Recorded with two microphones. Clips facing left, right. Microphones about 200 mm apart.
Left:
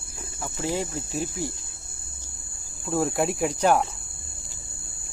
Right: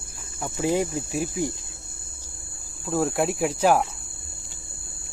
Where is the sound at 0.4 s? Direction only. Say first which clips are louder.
Right 5 dB; 15° right (ahead or behind).